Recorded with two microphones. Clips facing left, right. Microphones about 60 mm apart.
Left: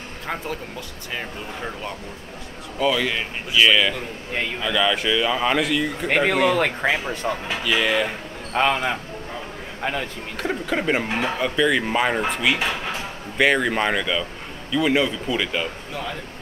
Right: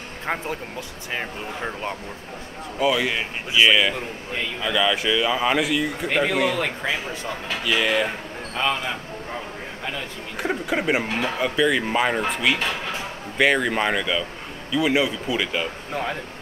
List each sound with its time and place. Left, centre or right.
0.3 s speech: right
2.8 s speech: centre
6.0 s speech: left
7.6 s speech: centre
8.5 s speech: left
10.3 s speech: centre
15.9 s speech: right